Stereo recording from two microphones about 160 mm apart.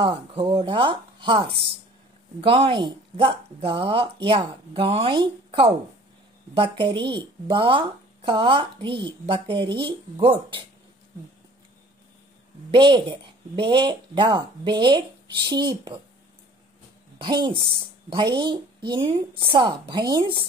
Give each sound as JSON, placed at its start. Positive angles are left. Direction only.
{"t": 0.0, "sound": "speech", "side_deg": -35}
{"t": 12.7, "sound": "speech", "side_deg": -30}
{"t": 17.2, "sound": "speech", "side_deg": -30}